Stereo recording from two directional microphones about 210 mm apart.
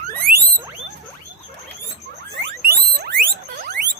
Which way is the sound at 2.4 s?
50° right (ahead or behind).